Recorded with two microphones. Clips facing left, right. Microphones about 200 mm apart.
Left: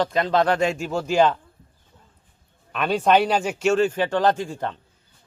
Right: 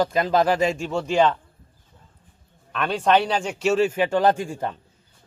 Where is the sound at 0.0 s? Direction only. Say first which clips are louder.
Even; 5° right (ahead or behind).